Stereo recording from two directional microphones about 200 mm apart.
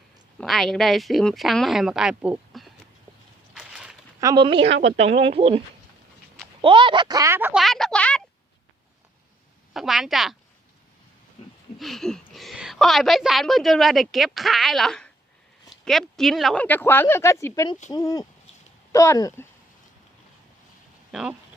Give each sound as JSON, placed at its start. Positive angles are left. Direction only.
{"t": 0.3, "sound": "a woman's voice", "side_deg": 0}
{"t": 3.5, "sound": "a sound", "side_deg": -5}
{"t": 4.2, "sound": "speech", "side_deg": -20}
{"t": 7.6, "sound": "a sound", "side_deg": 0}
{"t": 9.7, "sound": "a woman's voice", "side_deg": 0}
{"t": 11.8, "sound": "a woman's voice", "side_deg": 0}
{"t": 21.1, "sound": "speech", "side_deg": -5}